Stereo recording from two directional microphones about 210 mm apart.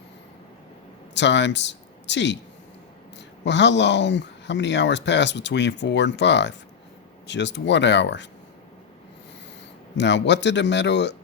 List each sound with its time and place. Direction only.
1.1 s speech: 55° left (ahead or behind)
10.0 s speech: 55° left (ahead or behind)